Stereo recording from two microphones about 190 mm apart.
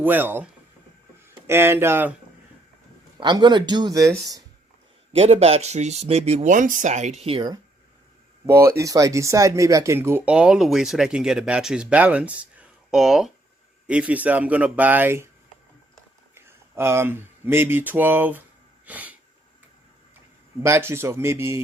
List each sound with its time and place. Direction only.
0.0 s speech: 10° right (ahead or behind)
1.5 s speech: 10° right (ahead or behind)
3.2 s speech: 25° right (ahead or behind)
5.1 s speech: 35° right (ahead or behind)
8.4 s speech: 15° right (ahead or behind)
16.3 s speech: 10° right (ahead or behind)
18.9 s sneeze: 10° right (ahead or behind)
20.6 s speech: 15° right (ahead or behind)